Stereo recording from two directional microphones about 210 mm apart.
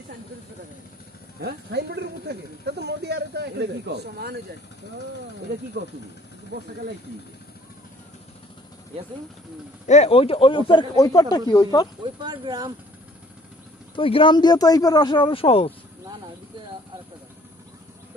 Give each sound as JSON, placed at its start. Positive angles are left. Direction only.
{"t": 1.4, "sound": "speech", "side_deg": -50}
{"t": 5.8, "sound": "speech", "side_deg": -55}
{"t": 9.8, "sound": "speech", "side_deg": 30}
{"t": 12.0, "sound": "speech", "side_deg": -20}
{"t": 13.9, "sound": "speech", "side_deg": 25}